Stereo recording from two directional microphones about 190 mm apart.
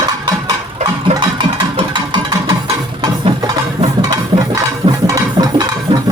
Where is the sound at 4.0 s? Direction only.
20° right (ahead or behind).